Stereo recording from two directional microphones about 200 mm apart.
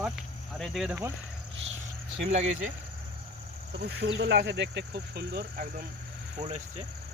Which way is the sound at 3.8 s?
55° right (ahead or behind).